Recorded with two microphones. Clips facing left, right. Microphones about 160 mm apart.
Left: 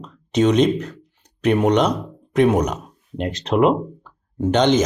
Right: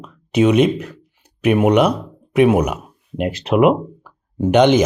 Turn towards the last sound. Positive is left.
turn(degrees=-10)  # may be behind; listen again after turning